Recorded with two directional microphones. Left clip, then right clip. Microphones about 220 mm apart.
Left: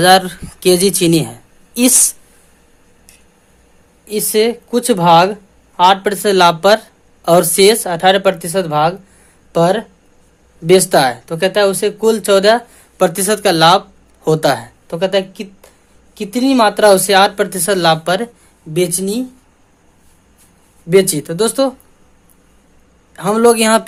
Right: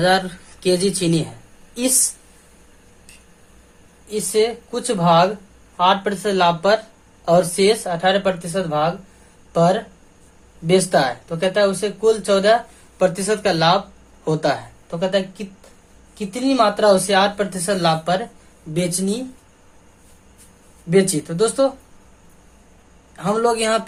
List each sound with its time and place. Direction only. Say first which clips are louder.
0.0 s speech: left 8 dB; 35° left (ahead or behind)
4.1 s speech: left 5 dB; 45° left (ahead or behind)
20.9 s speech: left 6 dB; 50° left (ahead or behind)
23.1 s speech: left 7 dB; 45° left (ahead or behind)